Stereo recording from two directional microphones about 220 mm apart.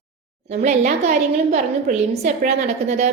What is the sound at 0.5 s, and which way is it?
A woman's voice, 30° right (ahead or behind).